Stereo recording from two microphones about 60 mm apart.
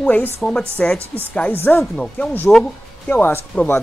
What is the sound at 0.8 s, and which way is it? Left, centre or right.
Speech, centre.